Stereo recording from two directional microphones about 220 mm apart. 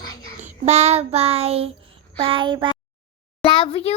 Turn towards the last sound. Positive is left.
turn(degrees=25)  # may be behind; listen again after turning